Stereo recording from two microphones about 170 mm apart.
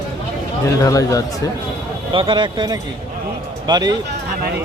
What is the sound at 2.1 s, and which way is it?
Speech, 30° right (ahead or behind).